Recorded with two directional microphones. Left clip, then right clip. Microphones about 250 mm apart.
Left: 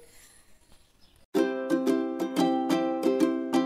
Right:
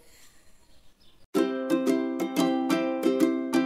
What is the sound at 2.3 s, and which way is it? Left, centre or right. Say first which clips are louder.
Music: even; left.